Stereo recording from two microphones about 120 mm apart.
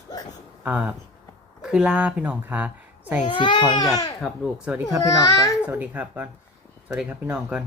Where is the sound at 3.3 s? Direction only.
40° left (ahead or behind).